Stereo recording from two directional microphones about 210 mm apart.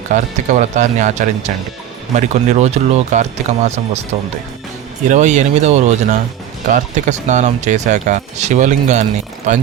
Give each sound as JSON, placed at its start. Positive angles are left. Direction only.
{"t": 0.1, "sound": "speech", "side_deg": -35}
{"t": 5.0, "sound": "speech", "side_deg": -35}